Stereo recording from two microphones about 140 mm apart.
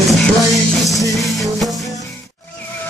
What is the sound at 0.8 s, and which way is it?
Music, centre (ahead or behind).